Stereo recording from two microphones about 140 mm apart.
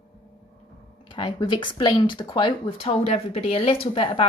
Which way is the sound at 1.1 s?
35° left (ahead or behind).